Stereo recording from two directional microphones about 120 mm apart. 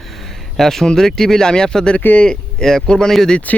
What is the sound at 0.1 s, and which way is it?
Speech, centre (ahead or behind).